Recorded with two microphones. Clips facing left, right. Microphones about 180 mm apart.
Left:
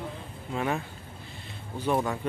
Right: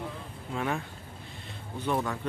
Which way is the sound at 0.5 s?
5° left (ahead or behind).